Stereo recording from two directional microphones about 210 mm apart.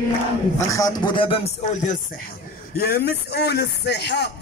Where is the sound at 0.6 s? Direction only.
15° left (ahead or behind); by 1.9 s 35° left (ahead or behind).